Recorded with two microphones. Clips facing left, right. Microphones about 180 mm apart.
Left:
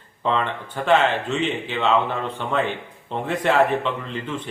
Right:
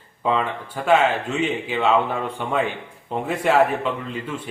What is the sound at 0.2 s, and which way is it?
Speech, 5° right (ahead or behind).